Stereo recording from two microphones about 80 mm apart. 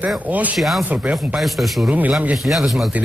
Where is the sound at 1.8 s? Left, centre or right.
Right.